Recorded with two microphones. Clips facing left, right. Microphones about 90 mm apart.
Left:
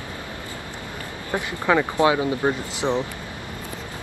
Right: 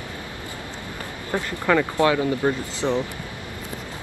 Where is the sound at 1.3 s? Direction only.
15° left (ahead or behind).